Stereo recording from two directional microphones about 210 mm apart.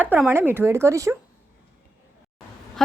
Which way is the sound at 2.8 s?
Centre (ahead or behind).